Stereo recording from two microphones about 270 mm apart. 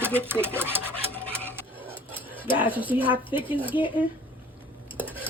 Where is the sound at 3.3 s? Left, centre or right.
Centre.